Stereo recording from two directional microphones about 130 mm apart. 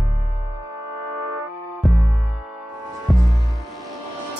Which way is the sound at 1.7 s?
Centre (ahead or behind).